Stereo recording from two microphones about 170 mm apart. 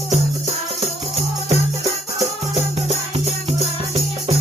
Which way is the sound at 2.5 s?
35° right (ahead or behind).